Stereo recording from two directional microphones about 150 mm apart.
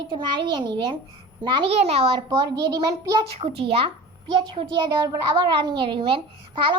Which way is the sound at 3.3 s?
40° right (ahead or behind).